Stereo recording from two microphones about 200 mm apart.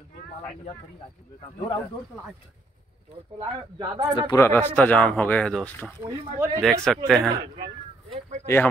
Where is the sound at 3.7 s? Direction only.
20° right (ahead or behind).